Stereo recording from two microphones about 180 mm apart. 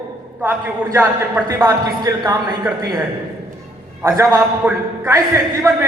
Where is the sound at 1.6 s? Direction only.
20° right (ahead or behind).